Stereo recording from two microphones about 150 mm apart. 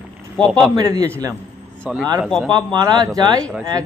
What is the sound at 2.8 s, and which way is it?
Speech, 25° right (ahead or behind).